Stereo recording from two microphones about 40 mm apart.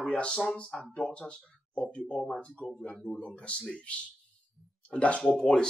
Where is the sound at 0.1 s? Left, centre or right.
Left.